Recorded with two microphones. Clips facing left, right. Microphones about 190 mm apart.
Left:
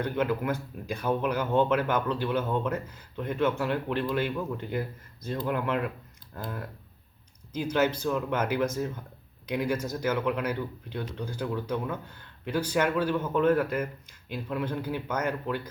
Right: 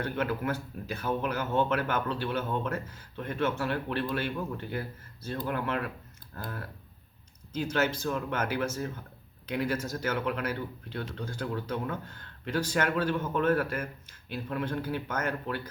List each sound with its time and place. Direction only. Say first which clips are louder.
0.0 s speech: left 3 dB; 15° left (ahead or behind)